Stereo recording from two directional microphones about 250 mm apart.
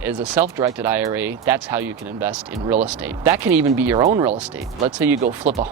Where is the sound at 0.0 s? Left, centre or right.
Centre.